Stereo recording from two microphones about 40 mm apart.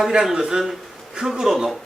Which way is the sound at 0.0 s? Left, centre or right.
Centre.